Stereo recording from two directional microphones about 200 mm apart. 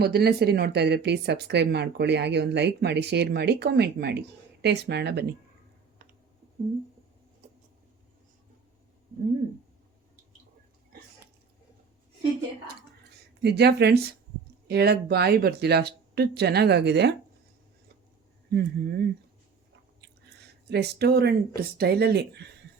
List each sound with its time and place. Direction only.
0.0 s speech: 50° right (ahead or behind)
13.4 s speech: 55° right (ahead or behind)
18.5 s speech: 55° right (ahead or behind)
20.7 s speech: 55° right (ahead or behind)